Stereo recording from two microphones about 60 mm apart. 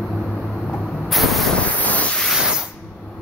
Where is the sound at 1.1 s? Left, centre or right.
Centre.